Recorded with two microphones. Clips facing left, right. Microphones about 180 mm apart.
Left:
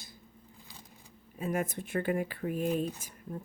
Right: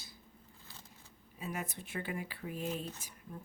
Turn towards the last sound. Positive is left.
turn(degrees=50)  # may be behind; listen again after turning